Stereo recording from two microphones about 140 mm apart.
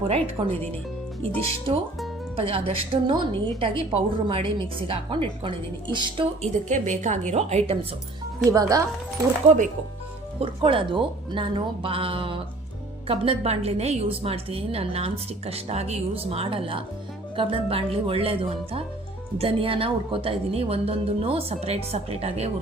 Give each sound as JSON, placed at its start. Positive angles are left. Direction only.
{"t": 0.4, "sound": "a woman's voice", "side_deg": -35}
{"t": 1.7, "sound": "a woman's voice", "side_deg": -40}
{"t": 6.4, "sound": "a woman's voice", "side_deg": -60}
{"t": 8.4, "sound": "speech", "side_deg": -25}
{"t": 9.5, "sound": "a woman's voice", "side_deg": -55}
{"t": 10.4, "sound": "a woman's voice", "side_deg": -40}